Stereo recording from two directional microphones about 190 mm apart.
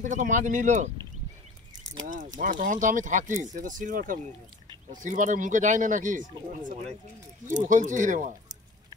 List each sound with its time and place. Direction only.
0.0 s speech: 40° right (ahead or behind)
2.0 s speech: 45° right (ahead or behind)